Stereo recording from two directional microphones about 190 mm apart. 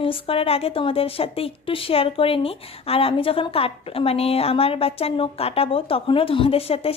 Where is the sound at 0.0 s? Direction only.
30° left (ahead or behind).